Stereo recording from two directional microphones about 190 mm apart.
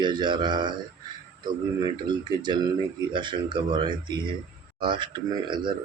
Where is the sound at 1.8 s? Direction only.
25° right (ahead or behind).